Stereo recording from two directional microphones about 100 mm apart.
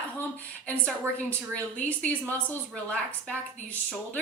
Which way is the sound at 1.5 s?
15° left (ahead or behind).